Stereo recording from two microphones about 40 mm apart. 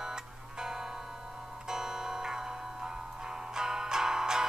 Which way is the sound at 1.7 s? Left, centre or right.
Centre.